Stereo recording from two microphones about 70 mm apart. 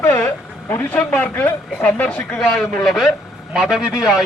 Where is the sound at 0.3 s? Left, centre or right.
Left.